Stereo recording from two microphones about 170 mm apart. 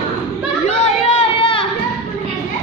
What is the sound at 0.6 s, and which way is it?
Chatter, 35° left (ahead or behind).